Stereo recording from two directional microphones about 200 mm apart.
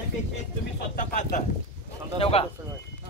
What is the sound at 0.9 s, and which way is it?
Speech, 40° left (ahead or behind).